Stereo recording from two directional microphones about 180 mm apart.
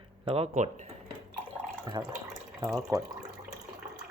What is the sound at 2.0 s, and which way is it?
Speech, 15° right (ahead or behind).